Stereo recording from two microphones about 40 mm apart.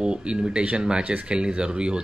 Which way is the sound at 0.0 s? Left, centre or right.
Right.